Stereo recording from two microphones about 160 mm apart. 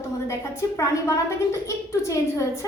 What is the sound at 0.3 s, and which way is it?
A woman's voice, 15° left (ahead or behind).